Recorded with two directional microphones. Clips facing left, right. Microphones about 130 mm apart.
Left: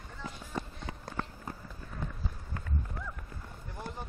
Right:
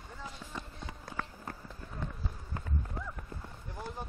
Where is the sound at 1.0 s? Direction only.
25° left (ahead or behind).